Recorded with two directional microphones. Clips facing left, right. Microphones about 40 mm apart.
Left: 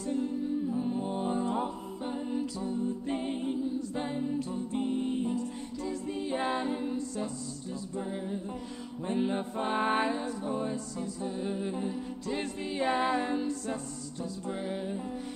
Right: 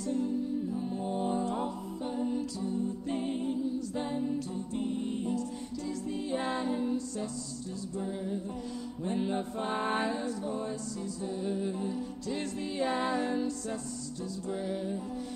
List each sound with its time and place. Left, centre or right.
0.7 s music: centre
4.7 s music: left
9.0 s music: centre